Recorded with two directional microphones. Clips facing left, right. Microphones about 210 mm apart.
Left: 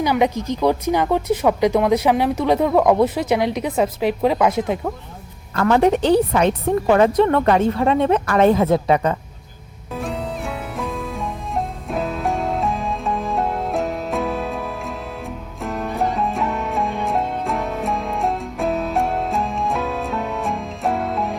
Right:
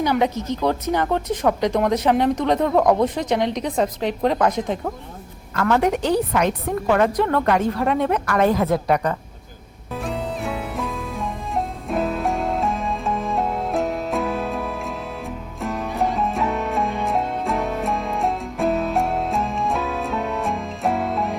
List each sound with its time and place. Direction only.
0.0 s speech: 10° left (ahead or behind)
5.7 s speech: 30° left (ahead or behind)
9.9 s music: centre (ahead or behind)